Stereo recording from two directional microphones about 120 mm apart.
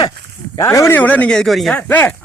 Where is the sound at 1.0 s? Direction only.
10° left (ahead or behind).